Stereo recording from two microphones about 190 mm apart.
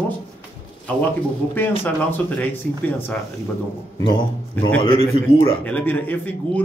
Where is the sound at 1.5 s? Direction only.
10° left (ahead or behind).